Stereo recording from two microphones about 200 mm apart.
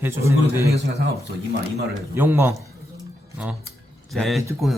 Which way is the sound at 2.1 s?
10° right (ahead or behind).